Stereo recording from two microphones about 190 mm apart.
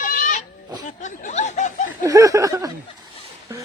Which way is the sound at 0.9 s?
40° left (ahead or behind).